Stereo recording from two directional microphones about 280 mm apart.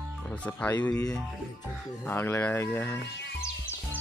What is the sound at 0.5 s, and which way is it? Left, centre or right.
Speech, centre.